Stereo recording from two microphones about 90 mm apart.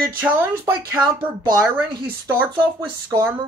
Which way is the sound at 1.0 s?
50° right (ahead or behind).